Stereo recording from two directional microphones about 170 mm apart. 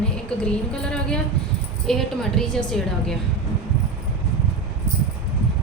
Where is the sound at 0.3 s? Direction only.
5° left (ahead or behind).